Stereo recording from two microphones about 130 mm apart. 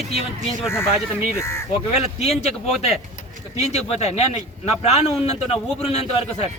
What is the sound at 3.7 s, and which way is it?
A man's voice, 60° left (ahead or behind).